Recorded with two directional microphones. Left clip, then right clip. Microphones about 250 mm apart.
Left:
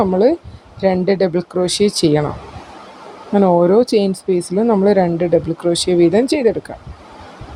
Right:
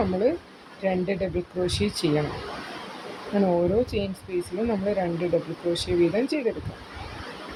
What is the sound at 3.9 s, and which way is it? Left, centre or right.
Speech, left.